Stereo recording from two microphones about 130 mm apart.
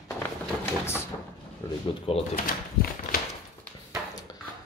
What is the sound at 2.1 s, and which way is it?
Speech, 45° left (ahead or behind).